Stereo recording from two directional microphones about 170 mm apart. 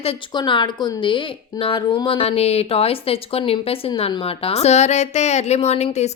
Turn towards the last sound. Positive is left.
turn(degrees=40)  # may be behind; listen again after turning